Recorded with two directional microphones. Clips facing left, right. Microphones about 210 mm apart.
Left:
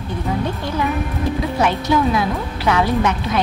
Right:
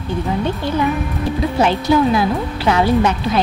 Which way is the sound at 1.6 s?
30° right (ahead or behind).